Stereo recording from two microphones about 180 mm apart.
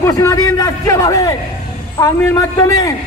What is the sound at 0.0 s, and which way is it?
A man's voice, 15° left (ahead or behind).